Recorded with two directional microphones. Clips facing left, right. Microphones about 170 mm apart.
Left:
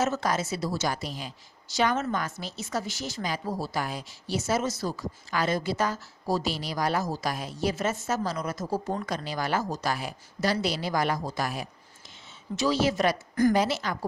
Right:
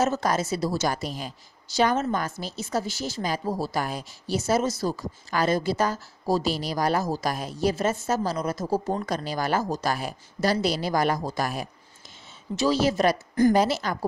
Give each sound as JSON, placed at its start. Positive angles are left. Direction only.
{"t": 0.0, "sound": "a woman's voice", "side_deg": -40}
{"t": 1.8, "sound": "a woman's voice", "side_deg": -35}
{"t": 13.3, "sound": "a woman's voice", "side_deg": -25}
{"t": 13.6, "sound": "a woman's voice", "side_deg": -40}